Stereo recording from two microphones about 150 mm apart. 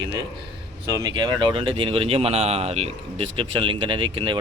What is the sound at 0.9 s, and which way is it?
Speech, 25° right (ahead or behind).